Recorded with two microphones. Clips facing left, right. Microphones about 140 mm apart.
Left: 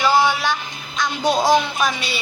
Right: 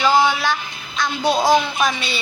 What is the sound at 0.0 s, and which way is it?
Female singing, 15° right (ahead or behind).